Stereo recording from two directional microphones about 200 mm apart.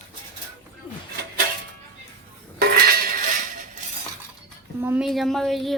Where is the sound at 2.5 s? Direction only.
50° right (ahead or behind).